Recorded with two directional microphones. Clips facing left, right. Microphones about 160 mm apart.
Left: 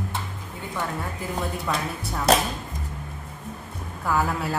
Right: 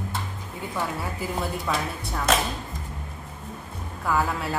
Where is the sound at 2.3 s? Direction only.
35° left (ahead or behind).